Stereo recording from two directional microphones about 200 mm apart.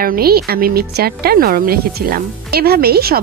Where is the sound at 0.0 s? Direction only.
50° right (ahead or behind).